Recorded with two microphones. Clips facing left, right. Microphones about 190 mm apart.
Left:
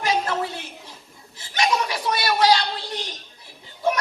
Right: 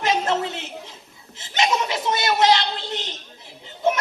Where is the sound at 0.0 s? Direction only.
25° right (ahead or behind).